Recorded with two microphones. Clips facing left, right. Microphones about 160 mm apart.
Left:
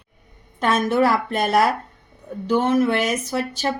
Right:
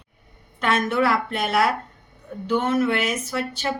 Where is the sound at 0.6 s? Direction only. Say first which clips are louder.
Left 3 dB; 40° left (ahead or behind).